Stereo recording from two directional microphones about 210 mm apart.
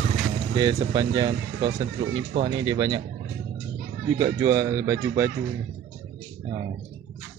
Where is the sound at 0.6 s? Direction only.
20° right (ahead or behind).